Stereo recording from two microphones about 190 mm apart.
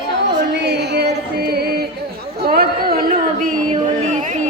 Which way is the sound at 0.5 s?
60° right (ahead or behind).